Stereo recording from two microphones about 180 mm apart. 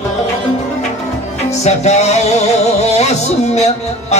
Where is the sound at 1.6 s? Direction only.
40° left (ahead or behind).